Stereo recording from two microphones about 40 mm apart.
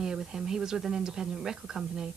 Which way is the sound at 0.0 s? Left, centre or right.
Centre.